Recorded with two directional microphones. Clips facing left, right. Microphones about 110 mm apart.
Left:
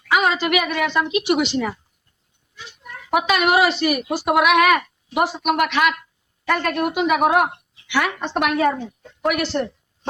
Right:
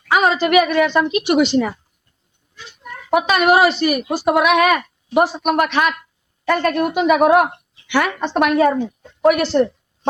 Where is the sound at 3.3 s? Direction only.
45° right (ahead or behind).